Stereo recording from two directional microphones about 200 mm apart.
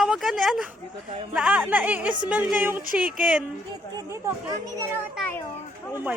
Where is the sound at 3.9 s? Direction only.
20° right (ahead or behind).